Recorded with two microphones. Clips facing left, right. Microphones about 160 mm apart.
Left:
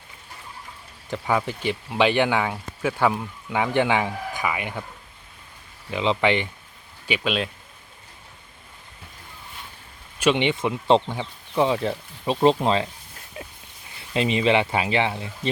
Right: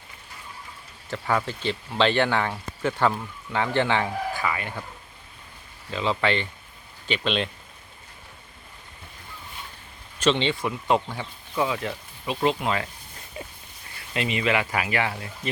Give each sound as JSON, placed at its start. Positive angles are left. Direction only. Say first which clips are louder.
{"t": 1.1, "sound": "speech", "louder": "left 2 dB", "side_deg": 15}
{"t": 5.9, "sound": "speech", "louder": "left 3 dB", "side_deg": 15}
{"t": 7.1, "sound": "a man's voice", "louder": "left 1 dB", "side_deg": 5}
{"t": 10.2, "sound": "speech", "louder": "left 2 dB", "side_deg": 15}
{"t": 13.1, "sound": "a sound", "louder": "right 1 dB", "side_deg": 0}
{"t": 14.1, "sound": "speech", "louder": "left 5 dB", "side_deg": 30}